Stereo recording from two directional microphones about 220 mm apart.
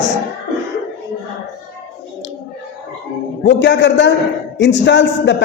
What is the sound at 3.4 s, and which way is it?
A man's voice, 50° left (ahead or behind).